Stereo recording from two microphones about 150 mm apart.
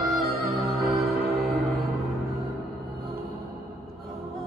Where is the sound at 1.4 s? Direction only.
Centre (ahead or behind).